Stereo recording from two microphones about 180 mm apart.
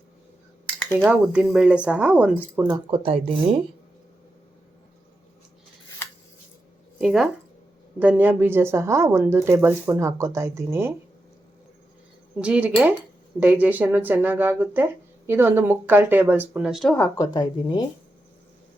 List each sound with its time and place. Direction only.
0.9 s speech: 5° right (ahead or behind)
2.6 s speech: 25° right (ahead or behind)
7.0 s speech: 5° right (ahead or behind)
12.4 s speech: 5° right (ahead or behind)
17.2 s speech: 25° left (ahead or behind)